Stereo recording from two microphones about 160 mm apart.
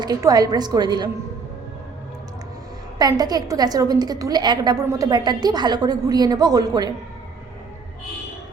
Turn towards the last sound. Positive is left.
turn(degrees=-25)  # may be behind; listen again after turning